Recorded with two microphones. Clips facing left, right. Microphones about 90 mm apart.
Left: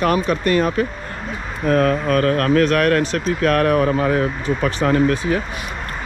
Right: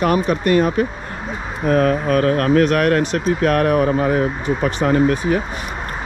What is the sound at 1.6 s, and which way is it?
Speech, 30° right (ahead or behind).